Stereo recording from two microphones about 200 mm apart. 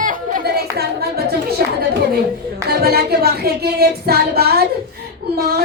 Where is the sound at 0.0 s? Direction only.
50° right (ahead or behind).